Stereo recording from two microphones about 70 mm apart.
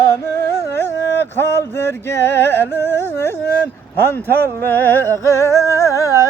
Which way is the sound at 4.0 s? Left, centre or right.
Left.